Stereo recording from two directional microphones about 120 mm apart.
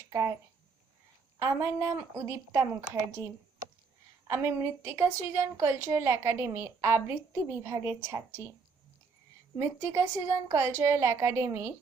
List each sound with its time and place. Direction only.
0.1 s speech: 25° right (ahead or behind)
1.4 s a woman's voice: 20° right (ahead or behind)
4.3 s a woman's voice: 20° right (ahead or behind)
9.6 s a woman's voice: 20° right (ahead or behind)